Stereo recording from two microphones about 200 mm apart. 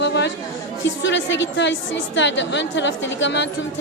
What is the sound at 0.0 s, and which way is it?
Chatter, 60° left (ahead or behind).